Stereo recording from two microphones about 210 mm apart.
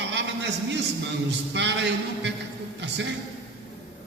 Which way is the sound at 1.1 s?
55° right (ahead or behind).